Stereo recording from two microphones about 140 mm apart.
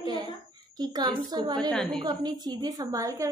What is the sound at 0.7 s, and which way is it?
Speech, 30° right (ahead or behind).